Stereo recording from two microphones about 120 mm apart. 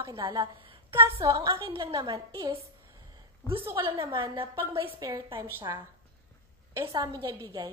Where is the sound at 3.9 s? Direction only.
45° right (ahead or behind).